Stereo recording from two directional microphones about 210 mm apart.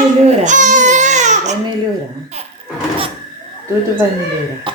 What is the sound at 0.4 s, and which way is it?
Baby cry, 35° right (ahead or behind).